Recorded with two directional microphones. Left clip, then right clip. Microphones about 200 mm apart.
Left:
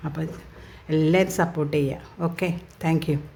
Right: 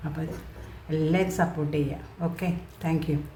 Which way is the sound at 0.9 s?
50° left (ahead or behind).